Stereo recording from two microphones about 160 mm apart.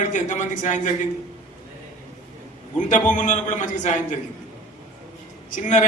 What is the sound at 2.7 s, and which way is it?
A man's voice, 50° left (ahead or behind).